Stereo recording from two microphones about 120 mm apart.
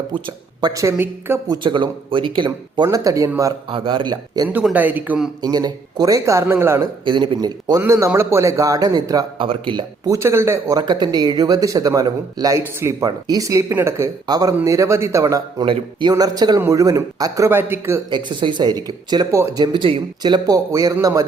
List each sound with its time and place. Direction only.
0.1 s speech: 40° right (ahead or behind)
0.7 s speech: 25° right (ahead or behind)
1.5 s speech: 40° right (ahead or behind)
3.7 s speech: 45° right (ahead or behind)
4.4 s speech: 10° right (ahead or behind)
5.4 s speech: 35° right (ahead or behind)
7.0 s speech: 40° right (ahead or behind)
7.8 s speech: 25° right (ahead or behind)
9.4 s speech: 45° right (ahead or behind)
10.1 s speech: 20° right (ahead or behind)
10.8 s speech: 35° right (ahead or behind)
15.6 s speech: 40° right (ahead or behind); by 18.0 s 20° right (ahead or behind)
18.1 s speech: 40° right (ahead or behind); by 21.2 s 25° right (ahead or behind)